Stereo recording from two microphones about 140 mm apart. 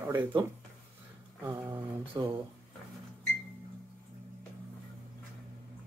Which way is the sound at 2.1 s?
30° right (ahead or behind).